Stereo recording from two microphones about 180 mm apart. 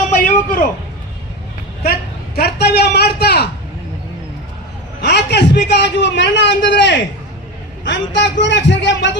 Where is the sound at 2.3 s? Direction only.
60° left (ahead or behind).